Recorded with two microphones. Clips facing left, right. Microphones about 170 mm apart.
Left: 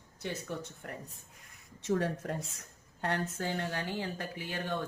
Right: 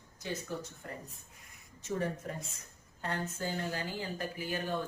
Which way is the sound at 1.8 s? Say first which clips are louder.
Left 4 dB; 75° left (ahead or behind).